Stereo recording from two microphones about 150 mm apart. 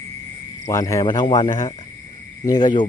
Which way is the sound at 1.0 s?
30° left (ahead or behind).